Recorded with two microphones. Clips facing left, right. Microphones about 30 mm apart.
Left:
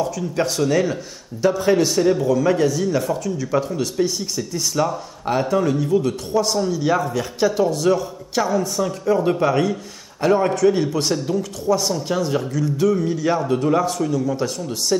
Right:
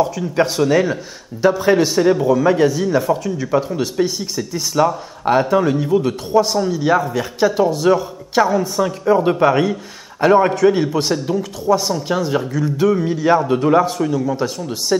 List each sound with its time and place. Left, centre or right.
0.0 s a man's voice: centre